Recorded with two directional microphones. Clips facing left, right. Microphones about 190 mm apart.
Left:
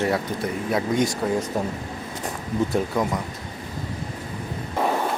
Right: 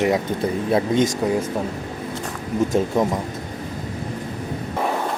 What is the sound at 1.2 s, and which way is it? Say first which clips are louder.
Speech: right 3 dB; 15° right (ahead or behind).